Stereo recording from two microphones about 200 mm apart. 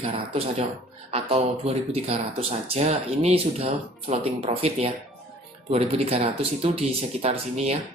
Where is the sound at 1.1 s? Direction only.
30° right (ahead or behind).